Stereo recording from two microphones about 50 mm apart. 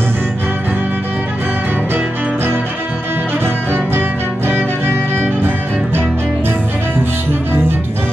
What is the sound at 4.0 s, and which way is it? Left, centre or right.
Music, right.